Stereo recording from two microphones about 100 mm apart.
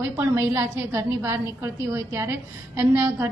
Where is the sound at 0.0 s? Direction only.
25° right (ahead or behind).